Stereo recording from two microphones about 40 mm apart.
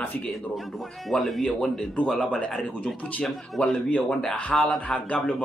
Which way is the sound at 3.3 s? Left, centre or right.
Centre.